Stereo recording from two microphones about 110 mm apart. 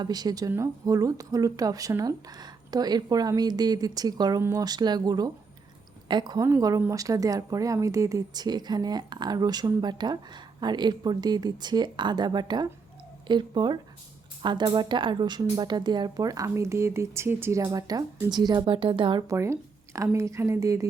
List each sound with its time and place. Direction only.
0.0 s speech: 35° right (ahead or behind)
19.3 s speech: 25° right (ahead or behind)